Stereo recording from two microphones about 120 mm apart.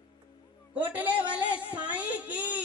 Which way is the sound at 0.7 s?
10° right (ahead or behind).